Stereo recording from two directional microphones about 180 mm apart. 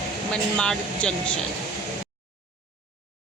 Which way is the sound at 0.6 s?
5° left (ahead or behind).